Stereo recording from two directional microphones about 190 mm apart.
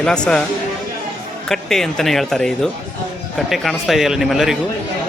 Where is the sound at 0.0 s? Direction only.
5° left (ahead or behind).